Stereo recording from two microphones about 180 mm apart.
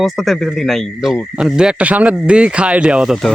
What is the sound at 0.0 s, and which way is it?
A man's voice, centre (ahead or behind).